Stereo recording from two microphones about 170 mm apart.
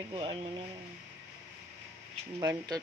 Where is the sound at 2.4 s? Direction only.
20° right (ahead or behind).